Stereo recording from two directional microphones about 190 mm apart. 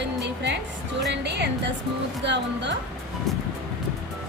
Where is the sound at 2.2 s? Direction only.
65° right (ahead or behind).